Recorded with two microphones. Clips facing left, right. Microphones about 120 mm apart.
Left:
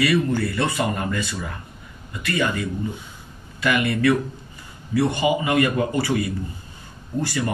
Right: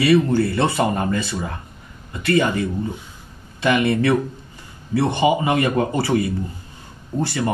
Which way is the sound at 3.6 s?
25° right (ahead or behind).